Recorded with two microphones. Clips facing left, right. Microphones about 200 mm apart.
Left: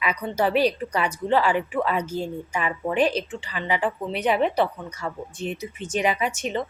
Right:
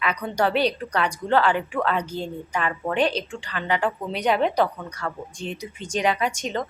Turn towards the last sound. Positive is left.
turn(degrees=5)  # may be behind; listen again after turning